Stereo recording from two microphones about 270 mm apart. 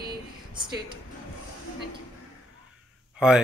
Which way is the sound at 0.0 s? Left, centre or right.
Centre.